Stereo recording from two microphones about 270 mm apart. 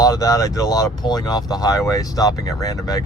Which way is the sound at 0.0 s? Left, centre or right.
Centre.